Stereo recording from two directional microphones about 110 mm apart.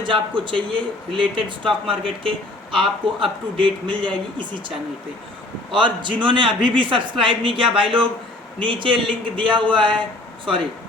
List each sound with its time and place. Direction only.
0.0 s speech: 50° right (ahead or behind)
5.7 s speech: 45° right (ahead or behind)